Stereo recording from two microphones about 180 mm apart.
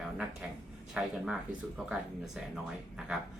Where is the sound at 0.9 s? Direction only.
5° right (ahead or behind).